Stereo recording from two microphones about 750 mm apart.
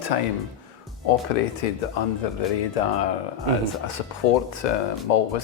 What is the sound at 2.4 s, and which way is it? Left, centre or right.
Speech, left.